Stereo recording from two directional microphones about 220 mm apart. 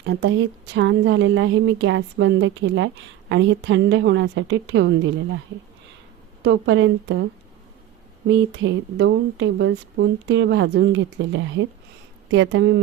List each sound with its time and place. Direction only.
0.0 s speech: 50° right (ahead or behind)
6.4 s speech: 55° right (ahead or behind)
8.3 s speech: 55° right (ahead or behind)